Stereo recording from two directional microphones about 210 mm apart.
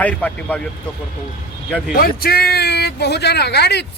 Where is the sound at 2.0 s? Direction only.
45° left (ahead or behind).